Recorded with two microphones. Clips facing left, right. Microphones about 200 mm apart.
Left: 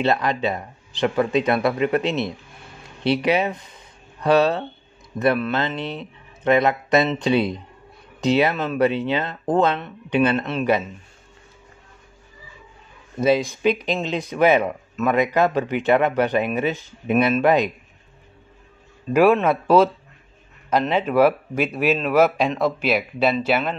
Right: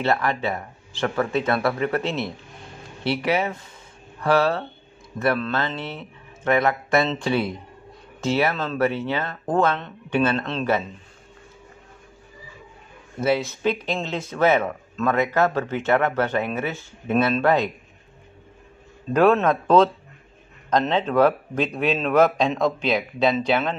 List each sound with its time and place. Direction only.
0.0 s speech: 20° left (ahead or behind)
13.2 s speech: 15° left (ahead or behind)
19.1 s speech: 10° left (ahead or behind)